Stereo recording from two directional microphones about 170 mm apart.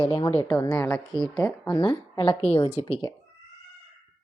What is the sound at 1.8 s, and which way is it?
A woman's voice, 35° left (ahead or behind).